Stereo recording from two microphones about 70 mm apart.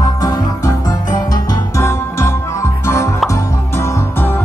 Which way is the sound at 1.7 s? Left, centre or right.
Left.